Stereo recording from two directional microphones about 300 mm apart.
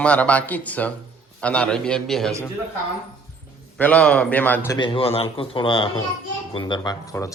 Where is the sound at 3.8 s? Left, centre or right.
Centre.